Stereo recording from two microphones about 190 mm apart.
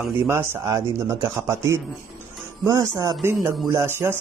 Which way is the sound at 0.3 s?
15° right (ahead or behind).